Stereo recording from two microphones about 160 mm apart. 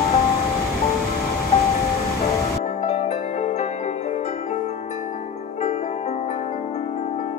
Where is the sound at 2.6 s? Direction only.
45° left (ahead or behind).